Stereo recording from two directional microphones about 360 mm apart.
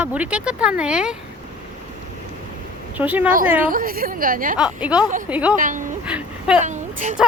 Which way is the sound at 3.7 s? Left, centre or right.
Right.